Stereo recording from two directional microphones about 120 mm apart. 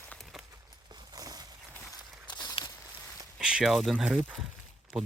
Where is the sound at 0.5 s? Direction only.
35° right (ahead or behind).